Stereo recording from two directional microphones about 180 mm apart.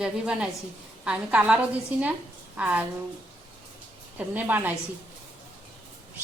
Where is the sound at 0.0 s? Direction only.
5° right (ahead or behind).